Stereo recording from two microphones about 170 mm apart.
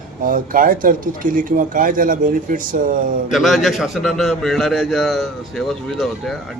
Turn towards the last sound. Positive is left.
turn(degrees=0)  # may be behind; listen again after turning